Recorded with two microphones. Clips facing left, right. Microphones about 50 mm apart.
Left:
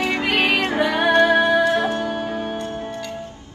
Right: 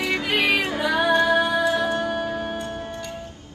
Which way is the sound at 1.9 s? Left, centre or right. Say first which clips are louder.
Left 1 dB; centre.